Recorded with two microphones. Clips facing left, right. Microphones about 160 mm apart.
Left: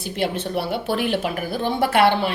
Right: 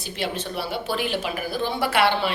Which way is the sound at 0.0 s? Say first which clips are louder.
Left 4 dB; 55° left (ahead or behind).